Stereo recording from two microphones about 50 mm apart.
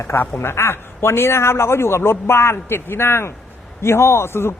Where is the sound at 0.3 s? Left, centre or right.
Left.